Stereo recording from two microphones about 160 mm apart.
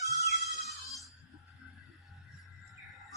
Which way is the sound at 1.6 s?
5° right (ahead or behind).